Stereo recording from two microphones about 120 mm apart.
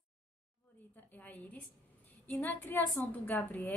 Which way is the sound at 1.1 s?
15° left (ahead or behind).